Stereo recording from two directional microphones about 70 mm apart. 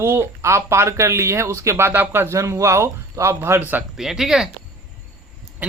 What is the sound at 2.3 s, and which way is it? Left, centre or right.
Speech, right.